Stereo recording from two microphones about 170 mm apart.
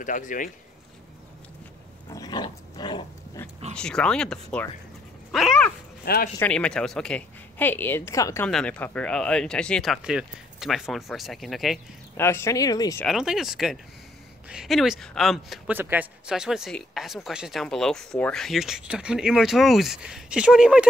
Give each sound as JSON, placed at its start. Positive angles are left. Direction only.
{"t": 0.0, "sound": "speech", "side_deg": 50}
{"t": 2.0, "sound": "dog", "side_deg": 25}
{"t": 3.4, "sound": "speech", "side_deg": 15}
{"t": 6.0, "sound": "speech", "side_deg": 65}
{"t": 6.4, "sound": "speech", "side_deg": 5}
{"t": 8.5, "sound": "speech", "side_deg": 5}
{"t": 12.2, "sound": "speech", "side_deg": 15}
{"t": 13.0, "sound": "speech", "side_deg": 0}